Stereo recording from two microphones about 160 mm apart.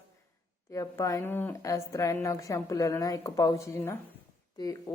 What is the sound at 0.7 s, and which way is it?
Speech, 20° left (ahead or behind).